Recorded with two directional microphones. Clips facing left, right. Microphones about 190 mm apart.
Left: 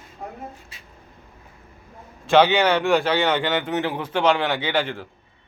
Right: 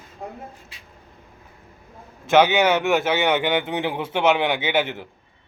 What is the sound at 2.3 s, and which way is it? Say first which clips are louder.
A man's voice: even; 15° right (ahead or behind).